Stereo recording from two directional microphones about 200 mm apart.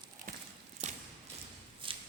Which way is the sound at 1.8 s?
25° right (ahead or behind).